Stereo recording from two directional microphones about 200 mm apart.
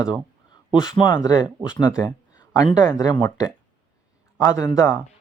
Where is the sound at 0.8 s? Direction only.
20° left (ahead or behind).